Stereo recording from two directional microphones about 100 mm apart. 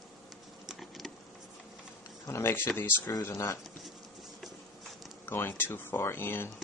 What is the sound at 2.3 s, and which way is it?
Speech, 25° left (ahead or behind).